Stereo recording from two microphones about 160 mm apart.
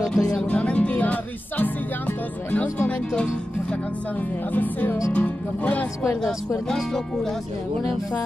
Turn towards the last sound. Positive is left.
turn(degrees=10)  # may be behind; listen again after turning